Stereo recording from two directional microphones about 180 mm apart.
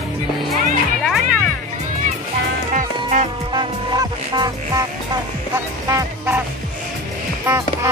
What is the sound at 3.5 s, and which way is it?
Music, 25° right (ahead or behind).